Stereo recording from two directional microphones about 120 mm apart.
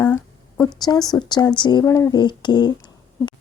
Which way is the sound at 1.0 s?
35° left (ahead or behind).